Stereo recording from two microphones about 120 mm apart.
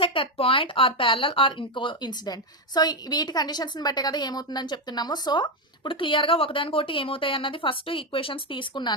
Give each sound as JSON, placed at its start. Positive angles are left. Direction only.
{"t": 0.0, "sound": "speech", "side_deg": 50}